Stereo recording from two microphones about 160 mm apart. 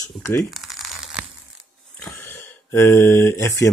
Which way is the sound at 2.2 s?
15° left (ahead or behind).